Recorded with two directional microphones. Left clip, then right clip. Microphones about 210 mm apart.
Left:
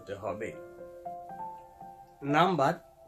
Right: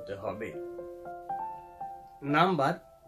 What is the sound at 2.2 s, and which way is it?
Speech, 15° left (ahead or behind).